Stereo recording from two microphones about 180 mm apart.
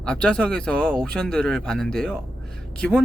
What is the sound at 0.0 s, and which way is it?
Speech, 5° left (ahead or behind).